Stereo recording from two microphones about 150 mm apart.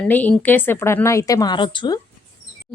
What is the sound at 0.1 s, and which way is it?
Speech, 10° left (ahead or behind).